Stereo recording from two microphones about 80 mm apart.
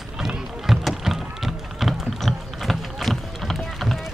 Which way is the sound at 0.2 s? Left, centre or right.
Centre.